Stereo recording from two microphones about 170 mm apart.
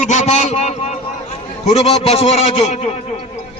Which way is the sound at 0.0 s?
45° left (ahead or behind).